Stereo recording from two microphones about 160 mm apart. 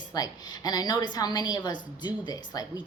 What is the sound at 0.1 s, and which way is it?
A man's voice, 25° left (ahead or behind).